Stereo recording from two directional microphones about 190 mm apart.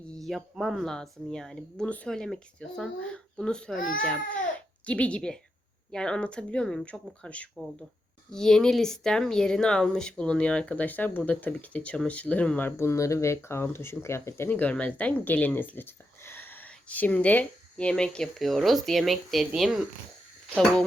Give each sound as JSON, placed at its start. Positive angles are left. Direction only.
{"t": 0.2, "sound": "speech", "side_deg": 0}
{"t": 3.8, "sound": "speech", "side_deg": 45}
{"t": 4.0, "sound": "a child's voice", "side_deg": 5}